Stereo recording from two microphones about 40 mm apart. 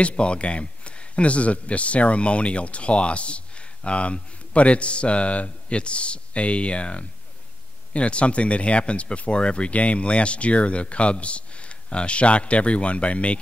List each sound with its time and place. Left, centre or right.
0.0 s speech: left